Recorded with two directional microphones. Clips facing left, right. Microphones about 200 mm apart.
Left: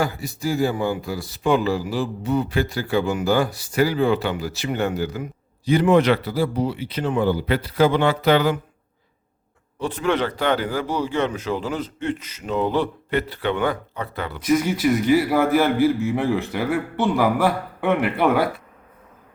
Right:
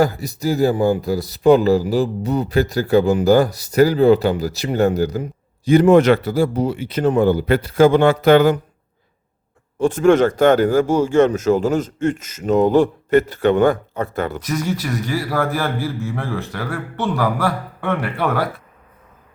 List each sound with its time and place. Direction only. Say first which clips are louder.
0.0 s speech: right 6 dB; 40° right (ahead or behind)
9.7 s speech: right 9 dB; 45° right (ahead or behind)
14.4 s a man's voice: left 4 dB; 15° left (ahead or behind)